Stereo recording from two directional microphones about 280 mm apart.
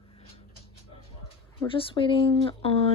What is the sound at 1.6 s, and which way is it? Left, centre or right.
Speech, centre.